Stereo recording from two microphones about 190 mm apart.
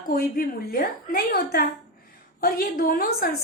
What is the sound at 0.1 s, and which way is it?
A woman's voice, 50° left (ahead or behind).